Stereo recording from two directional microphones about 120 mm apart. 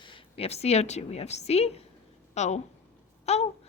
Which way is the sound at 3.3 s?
60° left (ahead or behind).